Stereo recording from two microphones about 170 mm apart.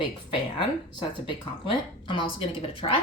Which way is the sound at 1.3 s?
30° left (ahead or behind).